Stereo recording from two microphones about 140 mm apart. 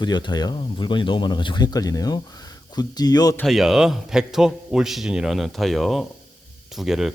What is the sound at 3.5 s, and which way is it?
A man's voice, centre (ahead or behind).